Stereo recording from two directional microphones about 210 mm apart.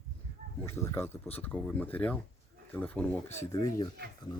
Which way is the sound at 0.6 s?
10° left (ahead or behind).